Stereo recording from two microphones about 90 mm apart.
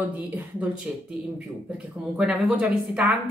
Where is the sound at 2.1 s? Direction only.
10° right (ahead or behind).